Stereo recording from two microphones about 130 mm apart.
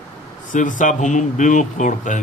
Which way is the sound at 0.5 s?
80° left.